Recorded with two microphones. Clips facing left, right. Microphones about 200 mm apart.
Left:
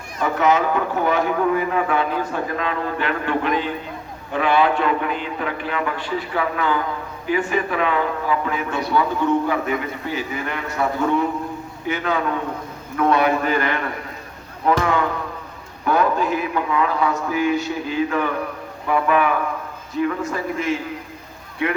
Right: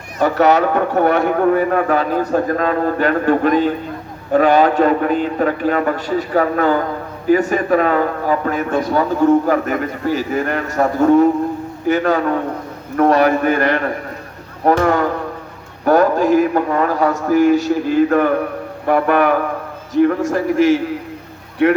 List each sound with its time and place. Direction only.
0.2 s a man's voice: 70° right (ahead or behind); by 18.3 s 50° right (ahead or behind)
18.9 s speech: 65° right (ahead or behind)
19.9 s a man's voice: 75° right (ahead or behind)